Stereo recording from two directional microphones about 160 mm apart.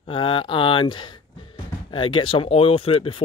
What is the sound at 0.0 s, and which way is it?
Speech, 35° left (ahead or behind).